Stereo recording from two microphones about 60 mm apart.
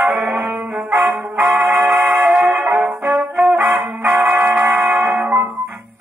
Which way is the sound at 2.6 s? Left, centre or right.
Right.